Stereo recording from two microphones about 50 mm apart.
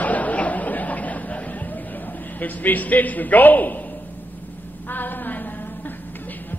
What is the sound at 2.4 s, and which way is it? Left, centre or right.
A man's voice, left.